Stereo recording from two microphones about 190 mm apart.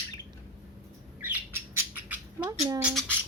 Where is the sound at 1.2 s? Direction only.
10° right (ahead or behind).